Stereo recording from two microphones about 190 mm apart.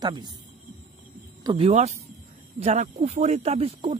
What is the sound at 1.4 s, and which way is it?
Speech, 25° right (ahead or behind).